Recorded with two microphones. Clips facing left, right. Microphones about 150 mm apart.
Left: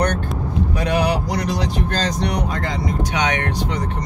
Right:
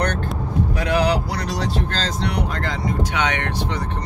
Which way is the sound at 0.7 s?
15° left (ahead or behind).